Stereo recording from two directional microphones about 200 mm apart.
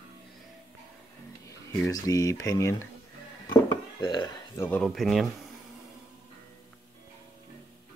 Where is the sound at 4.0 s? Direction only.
20° left (ahead or behind).